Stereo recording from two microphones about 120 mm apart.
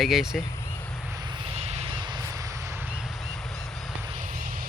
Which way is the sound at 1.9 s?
40° right (ahead or behind).